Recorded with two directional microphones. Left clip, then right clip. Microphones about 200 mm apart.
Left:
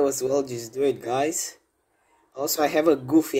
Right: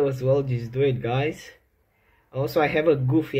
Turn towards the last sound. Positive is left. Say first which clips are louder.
# left 1 dB
turn(degrees=30)  # may be behind; listen again after turning